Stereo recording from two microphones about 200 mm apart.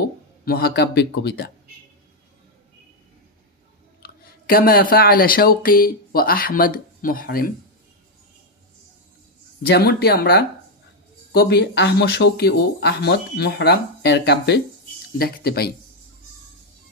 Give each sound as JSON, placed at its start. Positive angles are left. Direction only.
{"t": 0.5, "sound": "speech", "side_deg": 50}
{"t": 4.0, "sound": "speech", "side_deg": 50}
{"t": 9.7, "sound": "speech", "side_deg": 50}